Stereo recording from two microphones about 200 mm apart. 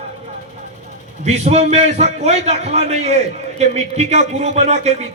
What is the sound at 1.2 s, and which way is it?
A man's voice, 35° right (ahead or behind).